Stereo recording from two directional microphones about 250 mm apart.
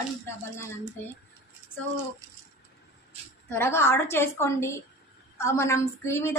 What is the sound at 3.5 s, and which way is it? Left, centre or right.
A woman's voice, centre.